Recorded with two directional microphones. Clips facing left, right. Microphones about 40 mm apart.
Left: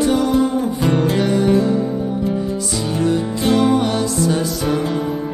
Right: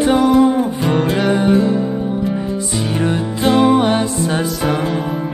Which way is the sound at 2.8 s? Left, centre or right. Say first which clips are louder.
Even; right.